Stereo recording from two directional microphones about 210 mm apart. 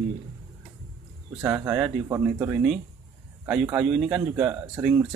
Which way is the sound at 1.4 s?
10° right (ahead or behind).